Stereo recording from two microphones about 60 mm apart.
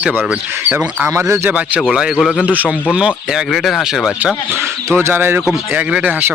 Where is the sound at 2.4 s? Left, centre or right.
Right.